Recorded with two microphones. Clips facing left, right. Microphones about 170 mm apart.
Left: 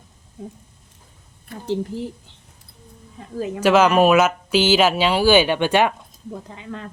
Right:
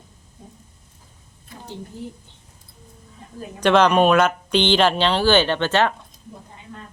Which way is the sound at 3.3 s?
90° left.